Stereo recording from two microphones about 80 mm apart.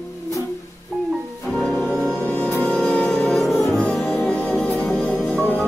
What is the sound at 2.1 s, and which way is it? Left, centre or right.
Music, left.